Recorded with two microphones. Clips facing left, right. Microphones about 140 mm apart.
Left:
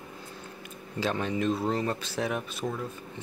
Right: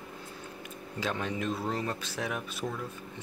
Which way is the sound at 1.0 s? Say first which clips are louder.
Left 4 dB; 30° left (ahead or behind).